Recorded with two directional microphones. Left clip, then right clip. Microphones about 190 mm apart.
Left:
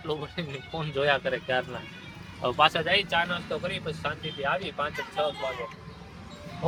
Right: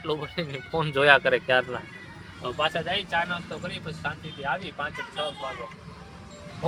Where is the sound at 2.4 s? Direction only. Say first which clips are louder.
Left 5 dB; 35° left (ahead or behind).